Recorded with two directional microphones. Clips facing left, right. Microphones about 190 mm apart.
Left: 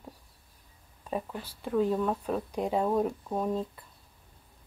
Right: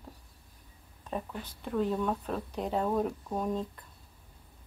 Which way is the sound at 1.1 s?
10° left (ahead or behind).